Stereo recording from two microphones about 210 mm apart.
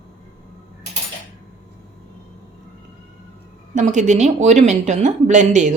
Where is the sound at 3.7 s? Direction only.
35° right (ahead or behind).